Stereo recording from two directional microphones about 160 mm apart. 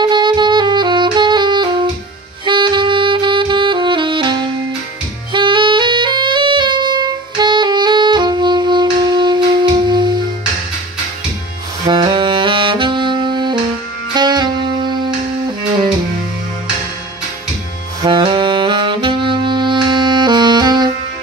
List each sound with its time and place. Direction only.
0.0 s saxophone: 30° right (ahead or behind)
11.8 s saxophone: 30° right (ahead or behind)
14.1 s music: 25° right (ahead or behind)
18.0 s saxophone: 30° right (ahead or behind)